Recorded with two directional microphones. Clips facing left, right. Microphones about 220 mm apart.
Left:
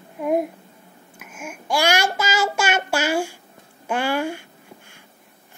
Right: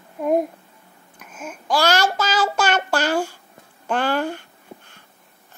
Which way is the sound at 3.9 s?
10° left (ahead or behind).